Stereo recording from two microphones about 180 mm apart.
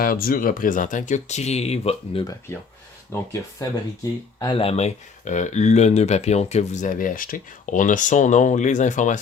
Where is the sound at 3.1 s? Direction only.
15° left (ahead or behind).